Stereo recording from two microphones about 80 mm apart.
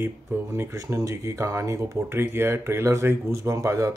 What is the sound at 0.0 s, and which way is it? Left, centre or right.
Speech, right.